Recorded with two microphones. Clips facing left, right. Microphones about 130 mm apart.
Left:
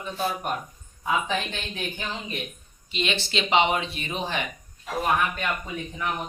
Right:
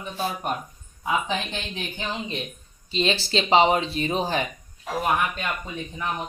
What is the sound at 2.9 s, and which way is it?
Speech, 35° right (ahead or behind).